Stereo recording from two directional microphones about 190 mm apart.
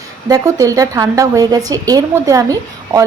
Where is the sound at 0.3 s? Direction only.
20° right (ahead or behind).